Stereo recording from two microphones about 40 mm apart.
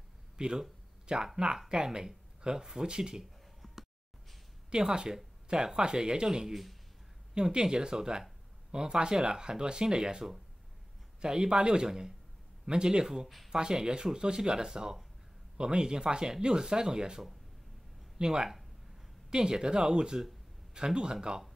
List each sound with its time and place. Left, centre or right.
0.4 s speech: centre
3.6 s a sound: centre
4.6 s speech: centre
6.5 s speech: centre
7.3 s speech: centre
18.2 s speech: centre